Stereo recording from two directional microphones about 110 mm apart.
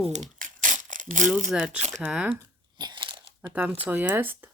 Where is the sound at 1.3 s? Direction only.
5° right (ahead or behind).